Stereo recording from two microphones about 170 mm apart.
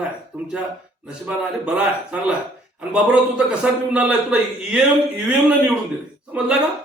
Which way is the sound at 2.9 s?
5° right (ahead or behind).